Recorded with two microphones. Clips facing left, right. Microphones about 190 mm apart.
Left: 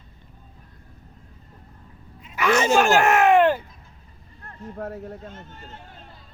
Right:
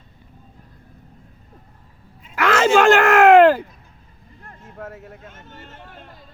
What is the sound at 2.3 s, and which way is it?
Fowl, 90° right.